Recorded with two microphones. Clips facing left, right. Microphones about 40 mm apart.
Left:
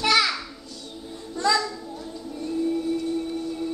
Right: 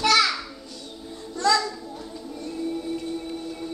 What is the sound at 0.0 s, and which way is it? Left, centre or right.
Music, centre.